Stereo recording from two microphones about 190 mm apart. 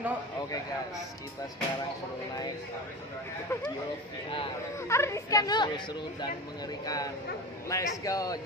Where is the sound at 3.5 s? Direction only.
10° left (ahead or behind).